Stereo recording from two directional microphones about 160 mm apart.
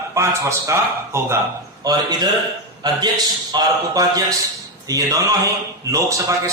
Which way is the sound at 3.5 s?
25° right (ahead or behind).